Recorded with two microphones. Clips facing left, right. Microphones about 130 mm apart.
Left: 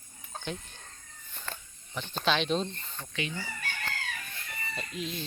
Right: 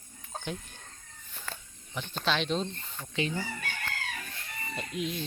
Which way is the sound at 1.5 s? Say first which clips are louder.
Left 1 dB; 5° right (ahead or behind).